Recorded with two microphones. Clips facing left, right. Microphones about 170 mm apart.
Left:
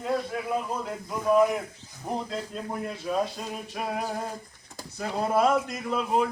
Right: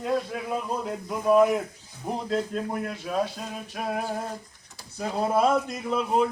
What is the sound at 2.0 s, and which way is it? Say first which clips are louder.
Speech: even; 15° right (ahead or behind).